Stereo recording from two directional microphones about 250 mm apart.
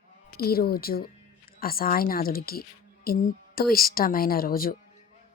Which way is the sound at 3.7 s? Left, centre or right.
Left.